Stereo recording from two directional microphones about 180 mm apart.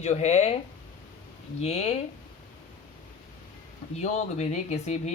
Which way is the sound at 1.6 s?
35° left (ahead or behind).